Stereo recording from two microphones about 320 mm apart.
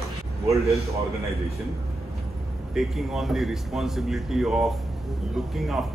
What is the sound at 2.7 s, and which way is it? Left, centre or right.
A man's voice, centre.